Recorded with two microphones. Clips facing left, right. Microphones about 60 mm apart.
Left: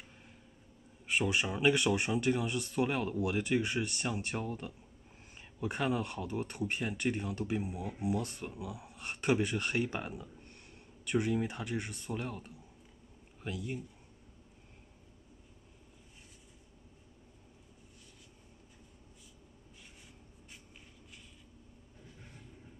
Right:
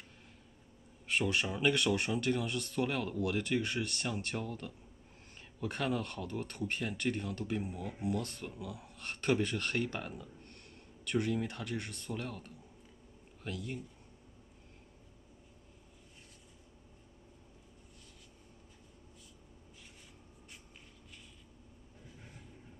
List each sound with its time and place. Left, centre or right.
1.0 s speech: centre